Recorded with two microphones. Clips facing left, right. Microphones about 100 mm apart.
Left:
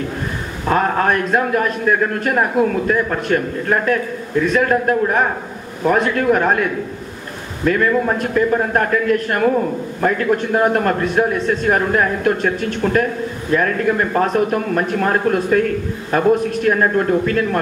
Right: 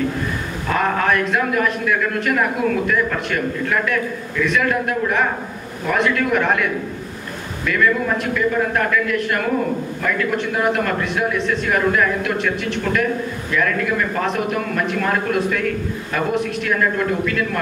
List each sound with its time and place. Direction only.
0.7 s a man's voice: 35° left (ahead or behind)